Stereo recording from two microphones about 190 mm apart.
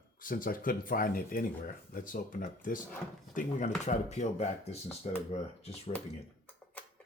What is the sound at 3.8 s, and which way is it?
Speech, 35° left (ahead or behind).